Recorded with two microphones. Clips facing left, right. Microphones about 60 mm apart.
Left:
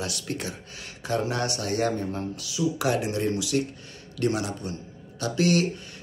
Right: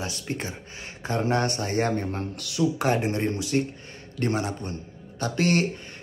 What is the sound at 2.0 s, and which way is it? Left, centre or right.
Speech, right.